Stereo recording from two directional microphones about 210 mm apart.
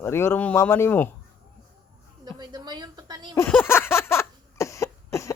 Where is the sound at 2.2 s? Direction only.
20° right (ahead or behind).